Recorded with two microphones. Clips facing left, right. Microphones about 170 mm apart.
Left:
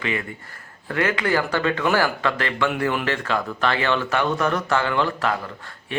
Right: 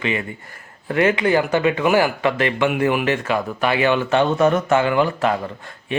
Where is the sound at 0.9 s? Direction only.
20° right (ahead or behind).